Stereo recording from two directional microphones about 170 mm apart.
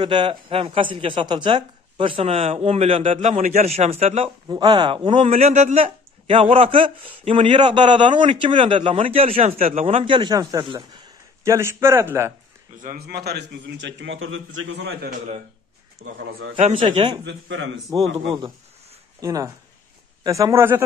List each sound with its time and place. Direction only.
0.0 s speech: 30° right (ahead or behind)
4.5 s a man's voice: 25° right (ahead or behind)
12.8 s a man's voice: 60° right (ahead or behind); by 16.5 s 90° right
16.5 s speech: 30° right (ahead or behind)
17.2 s a man's voice: 90° right
17.9 s a man's voice: 25° right (ahead or behind)
19.1 s a man's voice: 20° right (ahead or behind)